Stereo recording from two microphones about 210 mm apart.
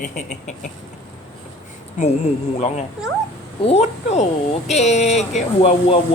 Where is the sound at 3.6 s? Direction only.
30° left (ahead or behind).